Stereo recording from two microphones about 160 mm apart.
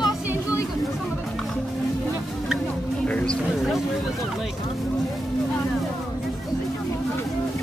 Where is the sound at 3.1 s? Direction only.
5° left (ahead or behind).